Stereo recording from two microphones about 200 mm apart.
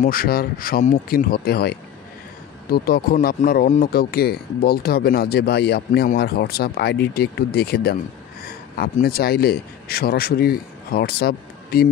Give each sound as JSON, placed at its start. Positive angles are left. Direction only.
{"t": 0.0, "sound": "speech", "side_deg": 45}